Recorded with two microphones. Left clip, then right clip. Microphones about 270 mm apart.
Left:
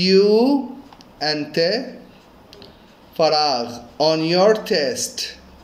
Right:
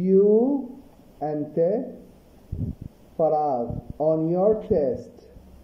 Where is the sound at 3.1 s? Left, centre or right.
Left.